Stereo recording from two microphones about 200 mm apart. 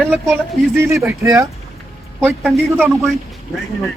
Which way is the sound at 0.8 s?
15° right (ahead or behind).